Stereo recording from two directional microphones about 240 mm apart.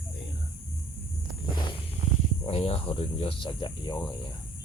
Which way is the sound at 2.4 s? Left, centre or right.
Left.